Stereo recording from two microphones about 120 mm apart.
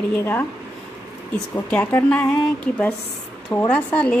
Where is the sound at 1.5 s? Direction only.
15° left (ahead or behind).